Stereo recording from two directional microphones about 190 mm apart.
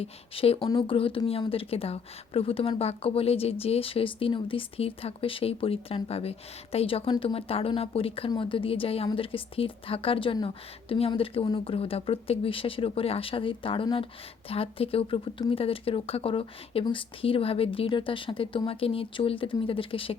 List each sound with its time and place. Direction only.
0.0 s speech: 30° left (ahead or behind)